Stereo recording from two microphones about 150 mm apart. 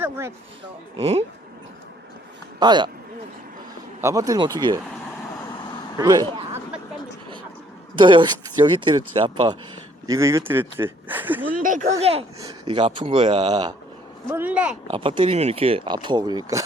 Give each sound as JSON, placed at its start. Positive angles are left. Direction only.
{"t": 0.0, "sound": "speech", "side_deg": -15}
{"t": 0.9, "sound": "speech", "side_deg": -40}
{"t": 2.6, "sound": "speech", "side_deg": -30}
{"t": 4.0, "sound": "speech", "side_deg": -25}
{"t": 6.0, "sound": "speech", "side_deg": -25}
{"t": 7.9, "sound": "speech", "side_deg": -30}
{"t": 10.1, "sound": "speech", "side_deg": -20}
{"t": 11.5, "sound": "speech", "side_deg": -60}
{"t": 11.9, "sound": "speech", "side_deg": -45}
{"t": 12.4, "sound": "speech", "side_deg": -30}
{"t": 14.3, "sound": "speech", "side_deg": -10}
{"t": 14.8, "sound": "speech", "side_deg": -35}